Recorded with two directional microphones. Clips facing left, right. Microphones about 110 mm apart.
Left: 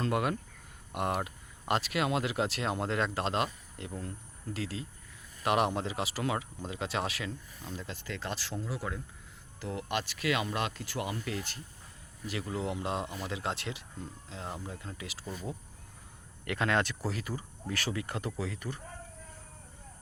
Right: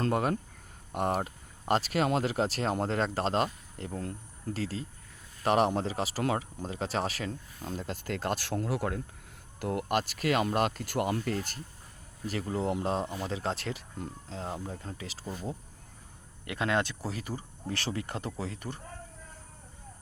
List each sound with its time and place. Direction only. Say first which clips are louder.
0.0 s speech: right 2 dB; 40° right (ahead or behind)